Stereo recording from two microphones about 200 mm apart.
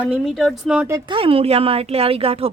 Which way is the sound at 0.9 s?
25° right (ahead or behind).